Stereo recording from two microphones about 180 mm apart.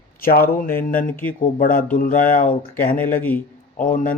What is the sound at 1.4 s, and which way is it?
Speech, 50° left (ahead or behind).